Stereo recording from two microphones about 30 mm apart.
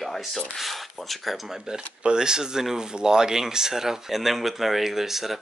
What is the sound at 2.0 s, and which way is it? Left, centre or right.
Speech, right.